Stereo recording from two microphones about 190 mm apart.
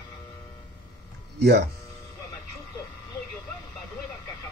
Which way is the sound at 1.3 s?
60° right (ahead or behind).